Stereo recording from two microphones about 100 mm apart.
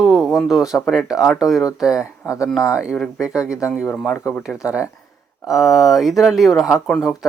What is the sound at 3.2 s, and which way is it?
Speech, 10° right (ahead or behind).